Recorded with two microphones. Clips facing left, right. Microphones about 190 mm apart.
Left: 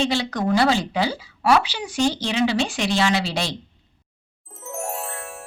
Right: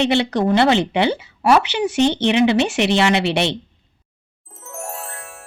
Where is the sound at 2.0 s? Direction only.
25° right (ahead or behind).